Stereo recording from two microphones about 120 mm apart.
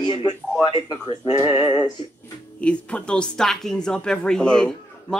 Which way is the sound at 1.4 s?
45° left (ahead or behind).